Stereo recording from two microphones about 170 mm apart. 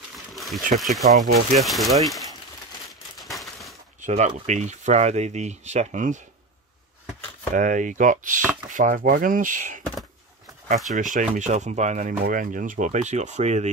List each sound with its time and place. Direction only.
0.1 s a sound: centre (ahead or behind)
0.7 s speech: centre (ahead or behind)
1.2 s speech: 50° right (ahead or behind)
1.6 s speech: centre (ahead or behind)
2.9 s a sound: centre (ahead or behind)
4.0 s speech: 45° right (ahead or behind)
7.5 s speech: 50° right (ahead or behind)
10.9 s speech: 50° right (ahead or behind)